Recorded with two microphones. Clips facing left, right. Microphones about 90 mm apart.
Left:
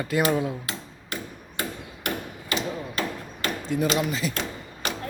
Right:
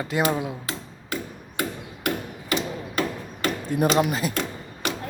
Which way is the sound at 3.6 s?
50° right (ahead or behind).